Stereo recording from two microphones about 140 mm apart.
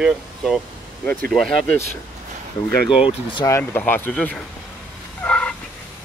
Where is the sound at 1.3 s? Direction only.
Centre (ahead or behind).